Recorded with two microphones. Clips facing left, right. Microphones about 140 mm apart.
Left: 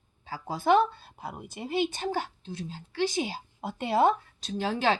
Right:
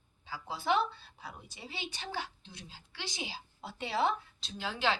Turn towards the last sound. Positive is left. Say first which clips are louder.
# left 7 dB
turn(degrees=50)  # may be behind; listen again after turning